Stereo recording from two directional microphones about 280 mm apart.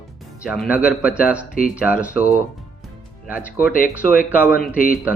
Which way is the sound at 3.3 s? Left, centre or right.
Centre.